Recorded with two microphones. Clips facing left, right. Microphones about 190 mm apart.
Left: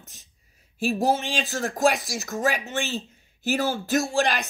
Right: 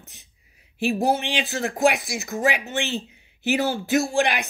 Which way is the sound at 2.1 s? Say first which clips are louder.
Right 2 dB; 15° right (ahead or behind).